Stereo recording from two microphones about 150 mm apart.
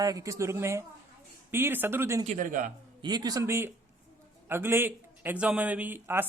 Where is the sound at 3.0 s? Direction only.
25° right (ahead or behind).